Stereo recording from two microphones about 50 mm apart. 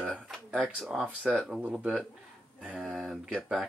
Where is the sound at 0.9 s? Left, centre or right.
Centre.